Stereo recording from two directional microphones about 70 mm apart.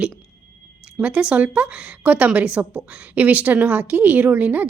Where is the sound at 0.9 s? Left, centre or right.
Centre.